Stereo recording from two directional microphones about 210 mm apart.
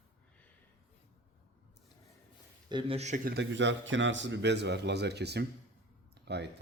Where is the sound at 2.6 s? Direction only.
25° right (ahead or behind).